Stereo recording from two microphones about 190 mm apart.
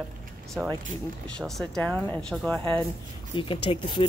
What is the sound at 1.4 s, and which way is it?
Speech, centre (ahead or behind).